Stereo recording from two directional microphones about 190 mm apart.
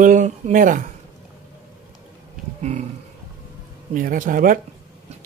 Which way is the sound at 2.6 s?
35° right (ahead or behind).